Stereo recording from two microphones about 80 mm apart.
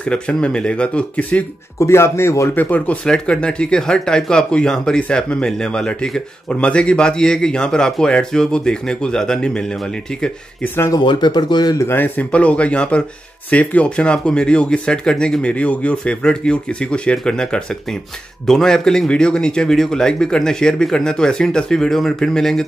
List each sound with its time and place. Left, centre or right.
0.0 s speech: centre
1.8 s speech: left
2.5 s speech: left
11.0 s speech: left
11.8 s speech: left; by 22.7 s centre